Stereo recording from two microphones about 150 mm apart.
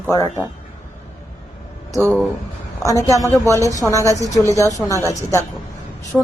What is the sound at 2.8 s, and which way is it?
Speech, 20° left (ahead or behind).